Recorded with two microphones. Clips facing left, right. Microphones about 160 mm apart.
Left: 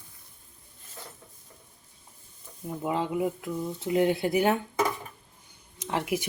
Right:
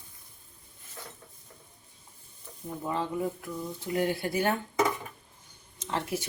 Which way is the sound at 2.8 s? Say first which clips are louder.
Left 3 dB; 15° left (ahead or behind).